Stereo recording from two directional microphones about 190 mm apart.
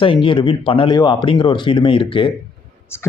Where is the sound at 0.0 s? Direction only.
25° left (ahead or behind).